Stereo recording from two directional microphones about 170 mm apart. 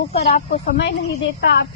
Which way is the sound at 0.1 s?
40° left (ahead or behind).